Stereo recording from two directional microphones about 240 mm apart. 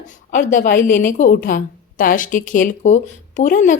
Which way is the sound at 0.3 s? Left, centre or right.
Left.